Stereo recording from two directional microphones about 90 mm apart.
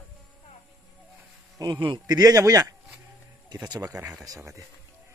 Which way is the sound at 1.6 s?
55° right (ahead or behind).